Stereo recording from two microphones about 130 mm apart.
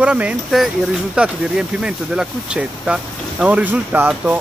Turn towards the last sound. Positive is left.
turn(degrees=-10)  # may be behind; listen again after turning